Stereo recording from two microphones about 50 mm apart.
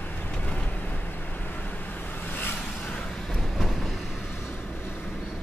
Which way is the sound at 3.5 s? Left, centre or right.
Centre.